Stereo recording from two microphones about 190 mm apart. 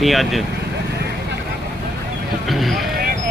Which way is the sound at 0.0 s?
Centre (ahead or behind).